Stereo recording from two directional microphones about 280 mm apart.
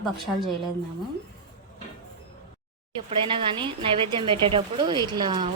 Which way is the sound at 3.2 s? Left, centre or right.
Centre.